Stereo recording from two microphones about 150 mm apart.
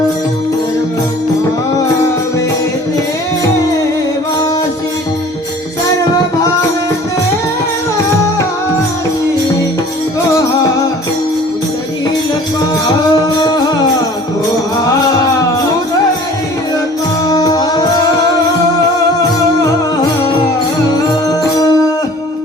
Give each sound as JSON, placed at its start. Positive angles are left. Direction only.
{"t": 17.2, "sound": "music", "side_deg": 25}
{"t": 21.2, "sound": "music", "side_deg": 25}